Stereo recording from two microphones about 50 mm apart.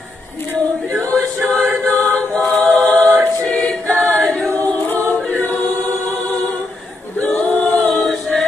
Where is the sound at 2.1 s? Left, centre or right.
Centre.